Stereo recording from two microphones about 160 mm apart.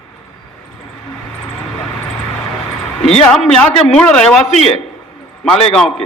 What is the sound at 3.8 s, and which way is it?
Speech, 5° left (ahead or behind).